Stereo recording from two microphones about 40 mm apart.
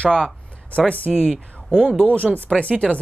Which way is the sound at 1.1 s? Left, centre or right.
Centre.